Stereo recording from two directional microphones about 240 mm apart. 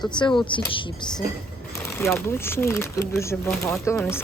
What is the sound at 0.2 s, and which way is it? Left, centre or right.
Speech, centre.